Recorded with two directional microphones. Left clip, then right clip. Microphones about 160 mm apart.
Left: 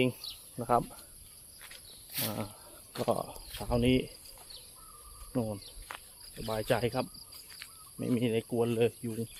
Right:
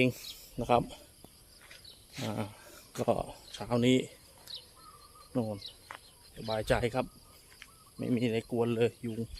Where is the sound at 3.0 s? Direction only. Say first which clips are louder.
Right 1 dB; 20° right (ahead or behind).